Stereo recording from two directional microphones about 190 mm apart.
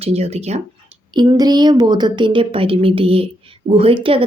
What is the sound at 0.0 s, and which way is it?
Speech, 35° right (ahead or behind).